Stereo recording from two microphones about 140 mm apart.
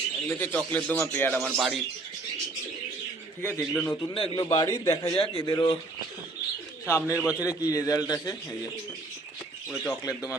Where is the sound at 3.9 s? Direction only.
25° left (ahead or behind).